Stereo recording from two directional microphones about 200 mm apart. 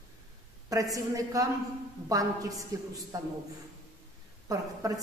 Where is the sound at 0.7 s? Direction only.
15° right (ahead or behind).